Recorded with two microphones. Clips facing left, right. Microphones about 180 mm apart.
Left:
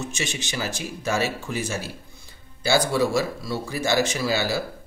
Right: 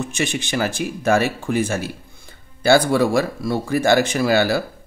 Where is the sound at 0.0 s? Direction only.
55° right (ahead or behind).